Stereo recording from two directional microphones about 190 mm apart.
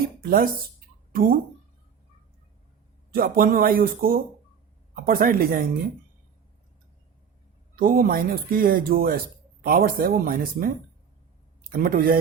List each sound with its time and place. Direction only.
0.2 s speech: 50° right (ahead or behind)
3.1 s speech: 50° right (ahead or behind)
7.8 s speech: 50° right (ahead or behind)